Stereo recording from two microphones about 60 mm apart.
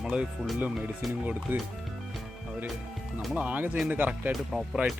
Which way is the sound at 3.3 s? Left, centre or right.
Right.